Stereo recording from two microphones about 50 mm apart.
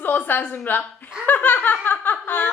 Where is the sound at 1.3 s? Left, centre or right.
Left.